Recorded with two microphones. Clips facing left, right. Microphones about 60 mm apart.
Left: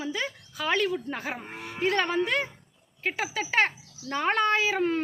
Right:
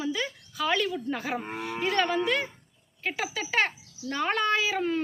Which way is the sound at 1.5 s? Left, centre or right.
Right.